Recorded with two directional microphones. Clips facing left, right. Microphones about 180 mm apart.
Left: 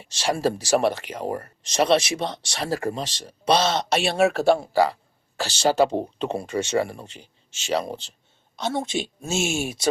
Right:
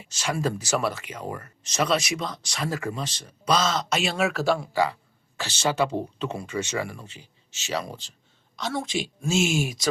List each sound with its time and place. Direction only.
0.0 s speech: 35° left (ahead or behind)